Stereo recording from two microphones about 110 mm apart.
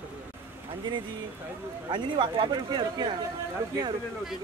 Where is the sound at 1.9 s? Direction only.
45° right (ahead or behind).